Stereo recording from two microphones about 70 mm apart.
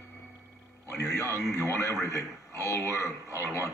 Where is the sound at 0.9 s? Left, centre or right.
Left.